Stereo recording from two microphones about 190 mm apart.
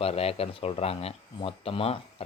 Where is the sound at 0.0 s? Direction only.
30° left (ahead or behind).